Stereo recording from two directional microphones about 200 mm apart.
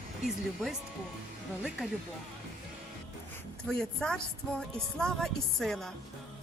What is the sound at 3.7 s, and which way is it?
Speech, 5° left (ahead or behind).